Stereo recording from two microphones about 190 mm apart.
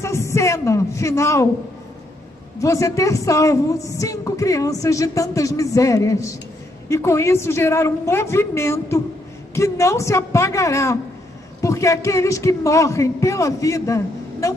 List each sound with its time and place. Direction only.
0.0 s a woman's voice: 15° left (ahead or behind)
2.6 s a woman's voice: 15° left (ahead or behind)